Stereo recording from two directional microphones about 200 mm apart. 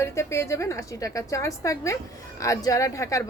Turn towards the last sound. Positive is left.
turn(degrees=15)  # may be behind; listen again after turning